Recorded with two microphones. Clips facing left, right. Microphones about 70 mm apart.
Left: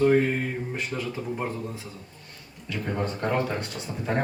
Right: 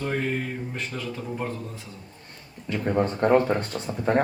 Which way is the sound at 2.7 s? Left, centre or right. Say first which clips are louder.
Right 5 dB; right.